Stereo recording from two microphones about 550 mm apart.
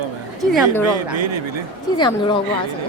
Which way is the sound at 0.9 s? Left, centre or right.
Right.